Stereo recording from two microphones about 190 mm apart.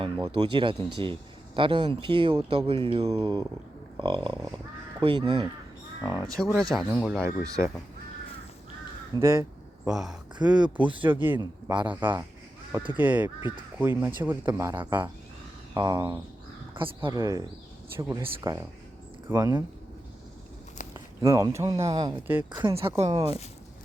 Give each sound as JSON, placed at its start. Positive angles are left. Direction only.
{"t": 0.0, "sound": "speech", "side_deg": -25}
{"t": 6.0, "sound": "speech", "side_deg": -10}
{"t": 7.3, "sound": "speech", "side_deg": -15}
{"t": 9.2, "sound": "a sound", "side_deg": -15}
{"t": 9.9, "sound": "speech", "side_deg": 0}
{"t": 20.9, "sound": "speech", "side_deg": -15}